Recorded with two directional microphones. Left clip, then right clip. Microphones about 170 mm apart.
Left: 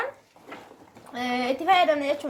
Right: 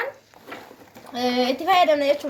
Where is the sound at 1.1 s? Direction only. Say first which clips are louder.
Right 4 dB; 50° right (ahead or behind); by 2.2 s 25° right (ahead or behind).